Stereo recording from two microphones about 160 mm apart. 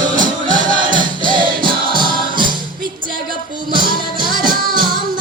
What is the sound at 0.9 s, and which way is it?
Music, 30° right (ahead or behind).